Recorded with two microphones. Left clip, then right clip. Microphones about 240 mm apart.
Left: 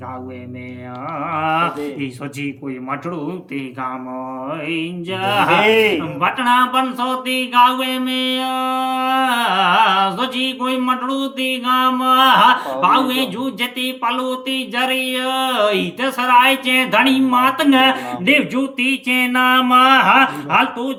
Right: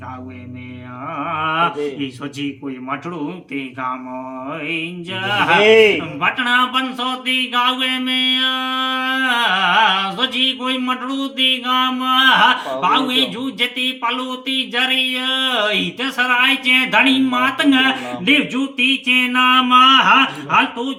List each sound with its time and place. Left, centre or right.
1.2 s speech: centre
5.5 s a man's voice: right
6.1 s speech: centre